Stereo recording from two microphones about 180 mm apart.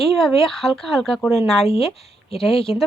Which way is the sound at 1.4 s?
35° left (ahead or behind).